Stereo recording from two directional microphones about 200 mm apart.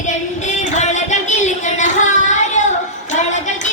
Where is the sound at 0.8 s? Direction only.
35° left (ahead or behind).